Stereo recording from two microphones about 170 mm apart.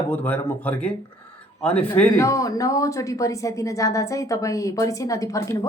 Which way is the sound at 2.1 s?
20° left (ahead or behind).